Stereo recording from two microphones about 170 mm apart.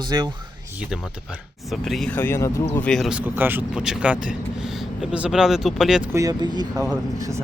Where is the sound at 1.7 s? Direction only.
Centre (ahead or behind).